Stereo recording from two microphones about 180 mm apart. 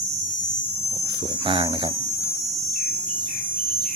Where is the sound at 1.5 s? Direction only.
30° right (ahead or behind).